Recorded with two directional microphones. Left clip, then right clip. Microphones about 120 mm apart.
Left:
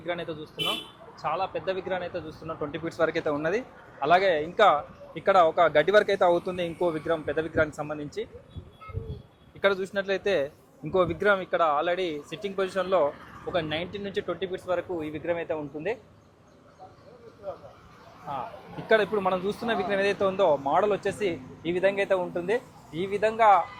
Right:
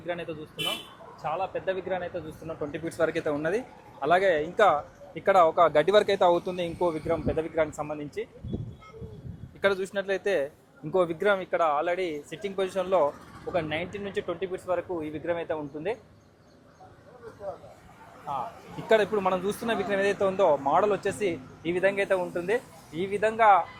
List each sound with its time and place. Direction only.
0.0 s speech: 10° right (ahead or behind)
9.6 s speech: 20° right (ahead or behind)
18.9 s speech: 25° right (ahead or behind)